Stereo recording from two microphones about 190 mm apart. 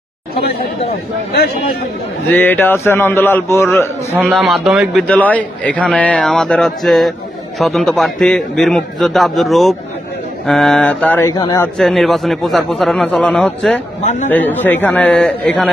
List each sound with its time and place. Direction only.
0.4 s speech: 55° left (ahead or behind)
2.2 s a man's voice: 10° left (ahead or behind)
4.2 s a man's voice: centre (ahead or behind); by 11.7 s 20° left (ahead or behind)
11.8 s a man's voice: centre (ahead or behind)